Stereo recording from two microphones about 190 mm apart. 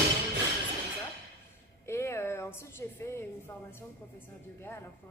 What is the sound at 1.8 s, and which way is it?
A woman's voice, 15° left (ahead or behind).